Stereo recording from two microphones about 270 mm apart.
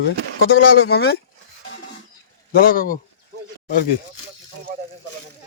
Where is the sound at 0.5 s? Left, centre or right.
Left.